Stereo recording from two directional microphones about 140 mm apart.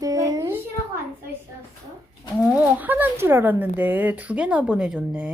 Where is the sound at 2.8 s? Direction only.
15° right (ahead or behind).